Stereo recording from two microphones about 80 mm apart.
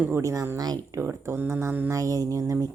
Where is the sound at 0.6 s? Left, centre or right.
Right.